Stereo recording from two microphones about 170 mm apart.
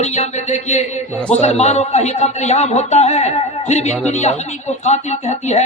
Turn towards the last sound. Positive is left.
turn(degrees=40)  # may be behind; listen again after turning